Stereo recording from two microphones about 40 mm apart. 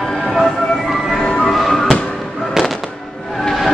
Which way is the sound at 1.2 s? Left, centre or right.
Left.